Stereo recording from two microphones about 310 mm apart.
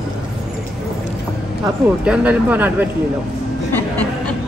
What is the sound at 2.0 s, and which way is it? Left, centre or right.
Speech, centre.